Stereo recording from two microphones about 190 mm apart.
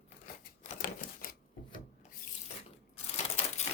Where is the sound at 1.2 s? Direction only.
50° left (ahead or behind).